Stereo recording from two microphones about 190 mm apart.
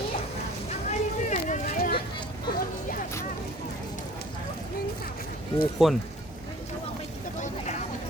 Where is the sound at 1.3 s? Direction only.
45° left (ahead or behind).